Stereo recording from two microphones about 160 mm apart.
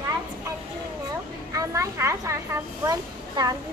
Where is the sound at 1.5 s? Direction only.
20° right (ahead or behind).